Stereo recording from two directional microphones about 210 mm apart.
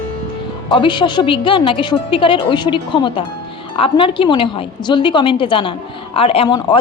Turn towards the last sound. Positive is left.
turn(degrees=25)  # may be behind; listen again after turning